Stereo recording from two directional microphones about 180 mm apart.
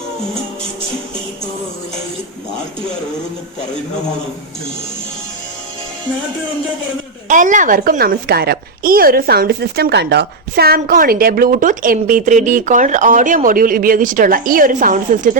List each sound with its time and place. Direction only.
7.3 s a woman's voice: 45° right (ahead or behind)